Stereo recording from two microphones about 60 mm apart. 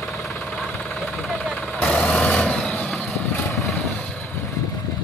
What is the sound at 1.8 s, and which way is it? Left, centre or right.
Vehicle, centre.